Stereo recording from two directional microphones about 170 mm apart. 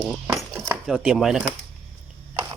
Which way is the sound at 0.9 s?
5° right (ahead or behind).